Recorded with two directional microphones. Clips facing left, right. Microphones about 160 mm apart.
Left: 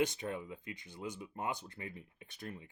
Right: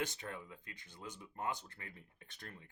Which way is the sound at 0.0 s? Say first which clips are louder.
Left 7 dB; 15° left (ahead or behind).